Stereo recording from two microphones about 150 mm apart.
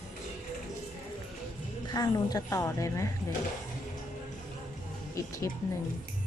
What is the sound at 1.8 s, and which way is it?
A woman's voice, 25° left (ahead or behind).